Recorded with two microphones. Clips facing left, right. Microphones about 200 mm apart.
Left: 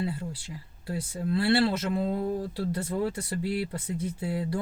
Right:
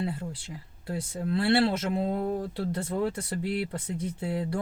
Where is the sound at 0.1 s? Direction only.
5° left (ahead or behind).